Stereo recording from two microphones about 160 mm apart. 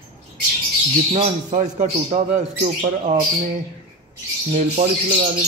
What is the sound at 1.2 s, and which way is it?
Speech, 50° right (ahead or behind).